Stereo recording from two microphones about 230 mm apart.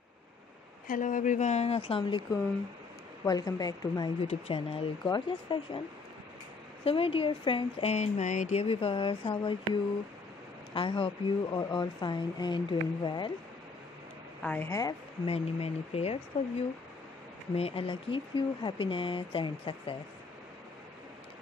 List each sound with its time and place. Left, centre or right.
0.8 s speech: left
3.3 s speech: centre
6.8 s speech: left
14.4 s speech: centre
15.3 s speech: left